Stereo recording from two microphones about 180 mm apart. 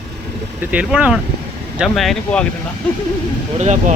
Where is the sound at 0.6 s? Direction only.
5° right (ahead or behind).